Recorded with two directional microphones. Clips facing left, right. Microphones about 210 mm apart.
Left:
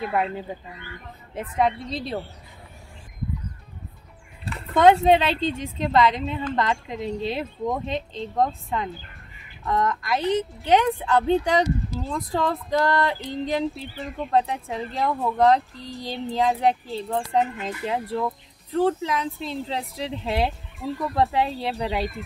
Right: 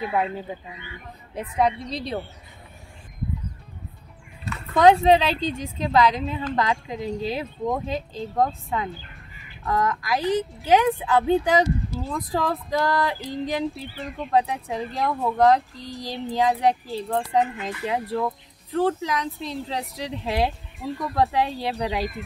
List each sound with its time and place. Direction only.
0.0 s a woman's voice: centre (ahead or behind)
4.7 s a woman's voice: centre (ahead or behind)